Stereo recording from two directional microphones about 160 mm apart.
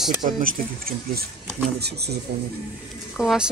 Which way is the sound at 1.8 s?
90° right.